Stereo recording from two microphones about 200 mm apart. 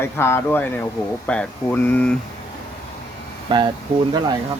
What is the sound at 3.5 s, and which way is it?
Speech, 25° right (ahead or behind).